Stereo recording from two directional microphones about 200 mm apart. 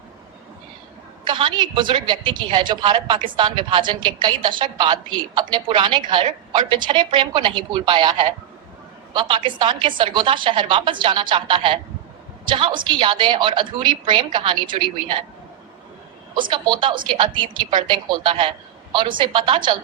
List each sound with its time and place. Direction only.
1.3 s a woman's voice: 25° right (ahead or behind)
16.3 s a woman's voice: 25° right (ahead or behind)